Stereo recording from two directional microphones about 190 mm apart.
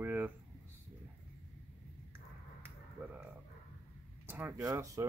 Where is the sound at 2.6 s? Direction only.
10° right (ahead or behind).